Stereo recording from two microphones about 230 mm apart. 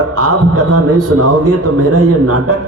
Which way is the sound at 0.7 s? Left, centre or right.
Right.